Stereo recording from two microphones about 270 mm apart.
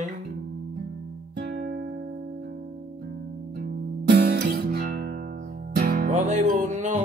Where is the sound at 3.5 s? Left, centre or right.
Right.